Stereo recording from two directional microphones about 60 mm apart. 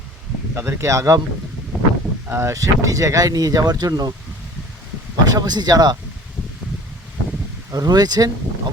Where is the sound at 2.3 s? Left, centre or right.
Right.